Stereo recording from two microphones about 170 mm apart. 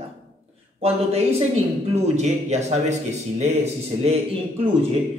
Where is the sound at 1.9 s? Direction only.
40° right (ahead or behind).